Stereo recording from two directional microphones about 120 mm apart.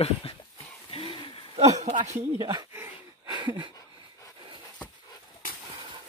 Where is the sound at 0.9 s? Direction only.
55° left (ahead or behind).